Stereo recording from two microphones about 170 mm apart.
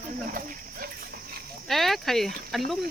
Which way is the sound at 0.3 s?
55° right (ahead or behind).